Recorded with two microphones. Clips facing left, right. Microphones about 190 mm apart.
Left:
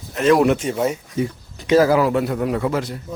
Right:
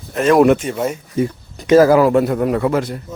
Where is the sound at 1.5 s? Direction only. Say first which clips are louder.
Right 5 dB; 45° right (ahead or behind).